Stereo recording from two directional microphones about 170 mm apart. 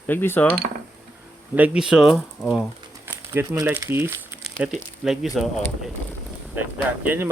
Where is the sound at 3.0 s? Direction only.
15° right (ahead or behind).